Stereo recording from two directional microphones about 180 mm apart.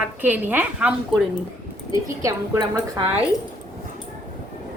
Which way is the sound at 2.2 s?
20° right (ahead or behind).